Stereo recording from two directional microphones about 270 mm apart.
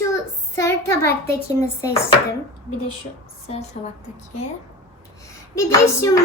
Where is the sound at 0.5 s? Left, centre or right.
Centre.